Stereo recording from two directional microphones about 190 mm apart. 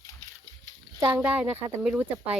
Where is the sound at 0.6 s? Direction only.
20° right (ahead or behind).